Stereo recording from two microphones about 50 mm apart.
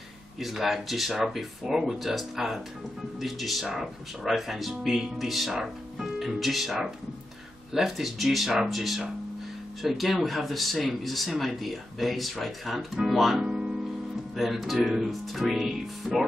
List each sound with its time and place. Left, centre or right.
0.4 s speech: centre
13.4 s music: centre
14.3 s speech: centre